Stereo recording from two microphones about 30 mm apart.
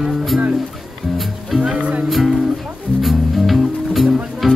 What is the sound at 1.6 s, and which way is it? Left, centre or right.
Music, right.